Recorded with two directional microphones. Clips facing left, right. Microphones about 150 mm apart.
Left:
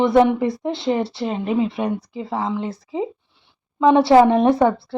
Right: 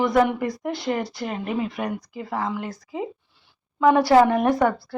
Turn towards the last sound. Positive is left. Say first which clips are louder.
# left 4 dB
turn(degrees=25)  # may be behind; listen again after turning